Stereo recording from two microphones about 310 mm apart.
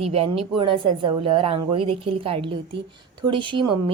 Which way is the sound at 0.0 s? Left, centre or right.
Centre.